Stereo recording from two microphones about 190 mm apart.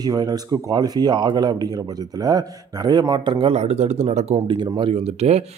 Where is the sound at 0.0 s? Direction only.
20° right (ahead or behind).